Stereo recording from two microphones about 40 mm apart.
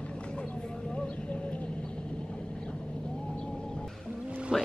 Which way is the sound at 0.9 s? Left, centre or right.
Left.